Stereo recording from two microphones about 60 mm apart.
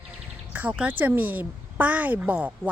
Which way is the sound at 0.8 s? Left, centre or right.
Right.